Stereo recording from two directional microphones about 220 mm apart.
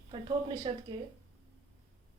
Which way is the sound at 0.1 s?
20° right (ahead or behind).